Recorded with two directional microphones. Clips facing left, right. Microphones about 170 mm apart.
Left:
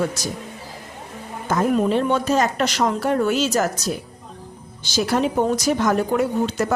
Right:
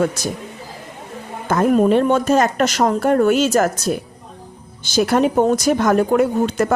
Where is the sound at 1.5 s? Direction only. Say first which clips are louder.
Right 5 dB; 50° right (ahead or behind).